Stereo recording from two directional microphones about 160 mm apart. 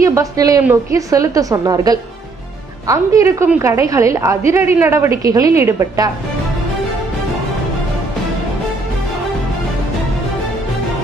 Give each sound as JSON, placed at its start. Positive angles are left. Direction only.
{"t": 0.0, "sound": "a woman's voice", "side_deg": -20}